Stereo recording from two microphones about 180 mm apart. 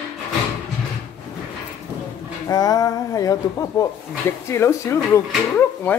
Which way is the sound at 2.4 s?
20° left (ahead or behind).